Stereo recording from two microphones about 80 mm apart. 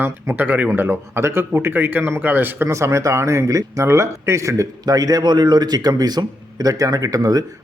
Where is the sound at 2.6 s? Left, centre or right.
Right.